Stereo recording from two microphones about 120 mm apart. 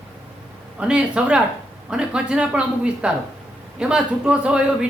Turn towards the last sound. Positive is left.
turn(degrees=-10)  # may be behind; listen again after turning